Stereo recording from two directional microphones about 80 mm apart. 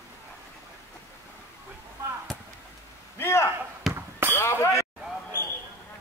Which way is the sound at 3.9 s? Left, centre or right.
Right.